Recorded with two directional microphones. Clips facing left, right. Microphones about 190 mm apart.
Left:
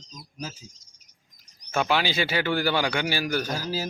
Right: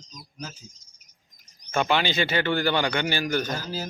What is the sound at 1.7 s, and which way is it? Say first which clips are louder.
A man's voice: right 1 dB; 5° left (ahead or behind).